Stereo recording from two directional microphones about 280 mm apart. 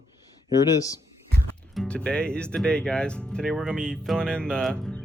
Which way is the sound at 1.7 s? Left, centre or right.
Centre.